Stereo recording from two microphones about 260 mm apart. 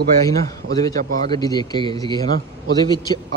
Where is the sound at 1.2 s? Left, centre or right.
Centre.